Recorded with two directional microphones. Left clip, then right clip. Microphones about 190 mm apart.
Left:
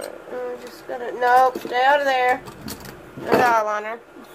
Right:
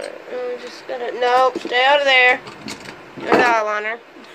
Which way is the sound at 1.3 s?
15° right (ahead or behind).